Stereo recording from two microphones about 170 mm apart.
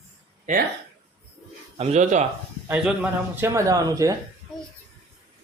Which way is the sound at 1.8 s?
40° right (ahead or behind).